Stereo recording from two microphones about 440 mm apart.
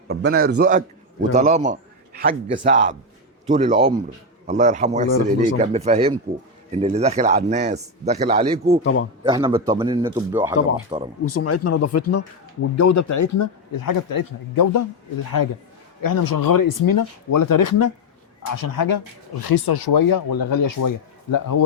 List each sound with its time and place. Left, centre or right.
0.1 s a man's voice: right
8.8 s a man's voice: left
9.2 s speech: centre
11.3 s speech: left
16.0 s a man's voice: left